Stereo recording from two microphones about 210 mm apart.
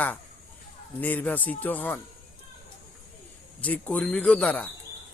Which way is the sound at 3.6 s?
5° left (ahead or behind).